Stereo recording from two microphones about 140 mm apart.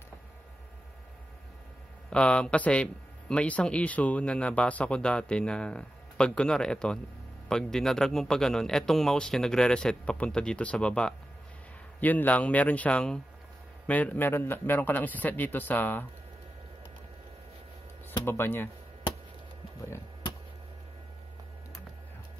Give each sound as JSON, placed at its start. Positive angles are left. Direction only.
{"t": 2.0, "sound": "a man's voice", "side_deg": 5}
{"t": 18.2, "sound": "a man's voice", "side_deg": 15}